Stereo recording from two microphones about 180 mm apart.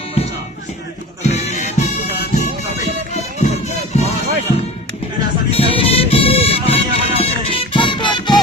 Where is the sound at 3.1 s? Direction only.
40° left (ahead or behind).